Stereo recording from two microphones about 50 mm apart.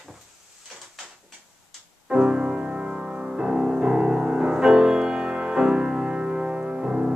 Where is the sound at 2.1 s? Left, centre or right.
Centre.